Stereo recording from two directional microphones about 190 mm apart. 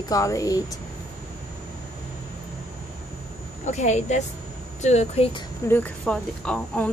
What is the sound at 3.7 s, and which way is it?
Speech, 35° left (ahead or behind).